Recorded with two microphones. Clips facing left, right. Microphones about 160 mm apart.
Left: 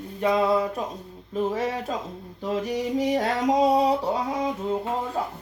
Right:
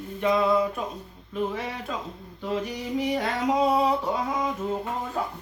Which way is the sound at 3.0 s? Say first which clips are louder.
Left 1 dB; 40° left (ahead or behind).